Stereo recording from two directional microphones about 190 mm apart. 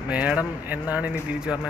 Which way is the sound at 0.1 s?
5° right (ahead or behind).